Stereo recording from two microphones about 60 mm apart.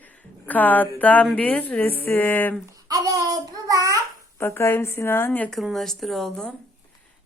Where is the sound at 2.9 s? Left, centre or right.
Right.